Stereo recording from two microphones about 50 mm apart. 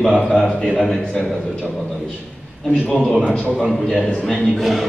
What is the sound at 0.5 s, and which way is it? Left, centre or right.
Speech, centre.